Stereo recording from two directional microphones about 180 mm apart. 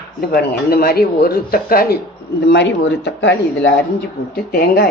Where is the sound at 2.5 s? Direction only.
75° left (ahead or behind).